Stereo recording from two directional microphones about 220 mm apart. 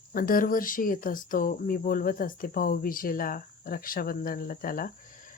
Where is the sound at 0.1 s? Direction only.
40° left (ahead or behind).